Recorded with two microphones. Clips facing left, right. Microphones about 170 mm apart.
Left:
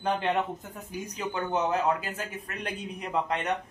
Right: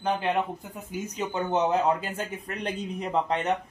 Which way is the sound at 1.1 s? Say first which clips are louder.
Right 3 dB; 20° right (ahead or behind).